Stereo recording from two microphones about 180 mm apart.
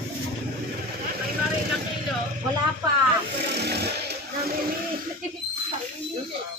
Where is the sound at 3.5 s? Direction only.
65° right (ahead or behind).